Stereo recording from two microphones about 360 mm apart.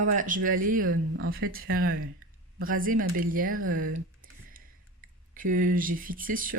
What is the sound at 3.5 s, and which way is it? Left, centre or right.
Speech, right.